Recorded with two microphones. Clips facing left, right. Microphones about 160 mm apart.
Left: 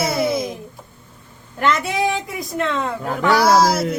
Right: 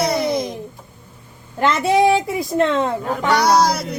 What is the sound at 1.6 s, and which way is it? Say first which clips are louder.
A woman's voice: right 4 dB; 30° right (ahead or behind).